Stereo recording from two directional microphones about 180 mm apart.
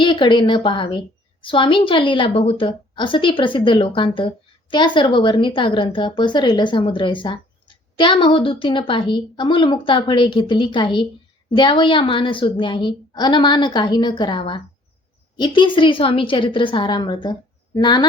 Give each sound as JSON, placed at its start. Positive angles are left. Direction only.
{"t": 0.0, "sound": "a woman's voice", "side_deg": 25}